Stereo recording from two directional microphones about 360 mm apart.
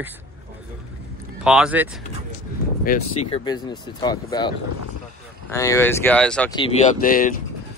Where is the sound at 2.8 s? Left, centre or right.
Left.